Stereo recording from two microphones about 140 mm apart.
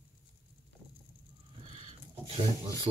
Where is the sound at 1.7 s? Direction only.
40° right (ahead or behind).